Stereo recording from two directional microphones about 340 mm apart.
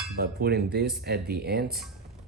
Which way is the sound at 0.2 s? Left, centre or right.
Right.